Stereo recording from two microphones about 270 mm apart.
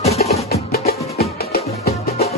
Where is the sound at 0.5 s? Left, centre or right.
Left.